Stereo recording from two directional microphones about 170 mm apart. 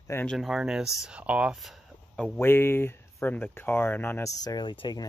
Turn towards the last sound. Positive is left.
turn(degrees=30)  # may be behind; listen again after turning